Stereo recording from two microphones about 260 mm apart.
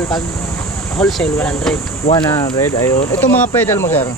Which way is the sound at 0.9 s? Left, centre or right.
Centre.